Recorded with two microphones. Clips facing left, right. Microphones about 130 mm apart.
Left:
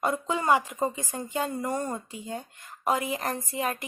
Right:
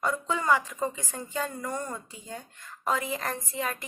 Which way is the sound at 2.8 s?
15° left (ahead or behind).